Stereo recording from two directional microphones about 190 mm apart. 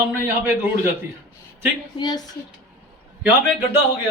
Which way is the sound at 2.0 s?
20° left (ahead or behind).